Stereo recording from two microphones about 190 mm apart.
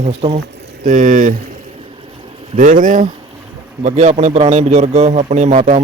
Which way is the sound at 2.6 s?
45° right (ahead or behind).